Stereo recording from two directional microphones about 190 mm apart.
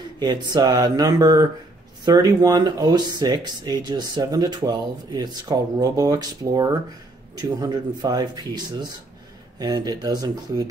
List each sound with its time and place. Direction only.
0.2 s speech: 25° right (ahead or behind)